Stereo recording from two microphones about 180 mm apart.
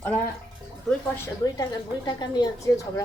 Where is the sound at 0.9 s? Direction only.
Centre (ahead or behind).